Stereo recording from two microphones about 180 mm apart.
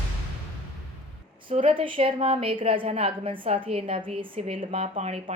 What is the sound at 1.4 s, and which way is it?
A woman's voice, 30° right (ahead or behind).